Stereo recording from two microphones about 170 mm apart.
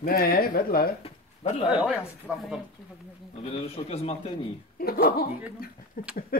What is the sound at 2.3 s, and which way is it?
Speech, 5° right (ahead or behind).